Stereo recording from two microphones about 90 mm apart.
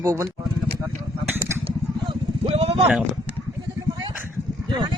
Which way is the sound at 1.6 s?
80° right.